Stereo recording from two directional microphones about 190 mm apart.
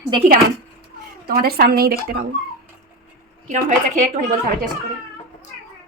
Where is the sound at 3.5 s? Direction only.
40° right (ahead or behind).